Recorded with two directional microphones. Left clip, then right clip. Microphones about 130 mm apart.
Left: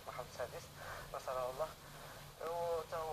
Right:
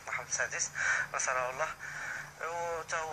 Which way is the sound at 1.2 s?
30° right (ahead or behind).